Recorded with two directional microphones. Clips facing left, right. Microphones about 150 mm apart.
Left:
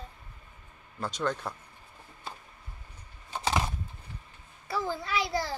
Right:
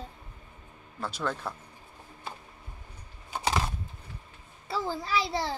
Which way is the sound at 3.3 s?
10° right (ahead or behind).